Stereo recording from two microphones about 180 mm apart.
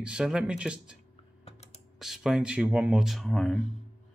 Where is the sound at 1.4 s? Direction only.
35° left (ahead or behind).